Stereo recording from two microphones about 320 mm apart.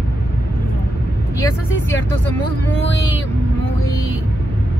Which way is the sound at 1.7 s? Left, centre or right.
Left.